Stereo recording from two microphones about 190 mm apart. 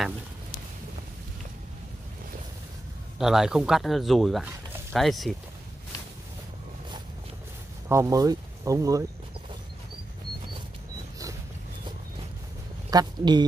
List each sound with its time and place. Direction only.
3.2 s speech: centre (ahead or behind)
7.9 s speech: 15° right (ahead or behind)
12.9 s speech: 20° right (ahead or behind)